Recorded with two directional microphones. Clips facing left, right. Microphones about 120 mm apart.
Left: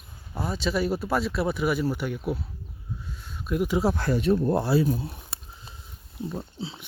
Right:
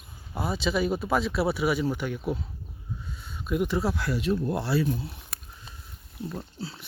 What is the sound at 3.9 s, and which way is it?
Speech, 50° left (ahead or behind).